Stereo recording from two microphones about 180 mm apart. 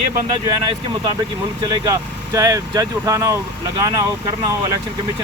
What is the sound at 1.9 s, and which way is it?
Speech, 20° right (ahead or behind).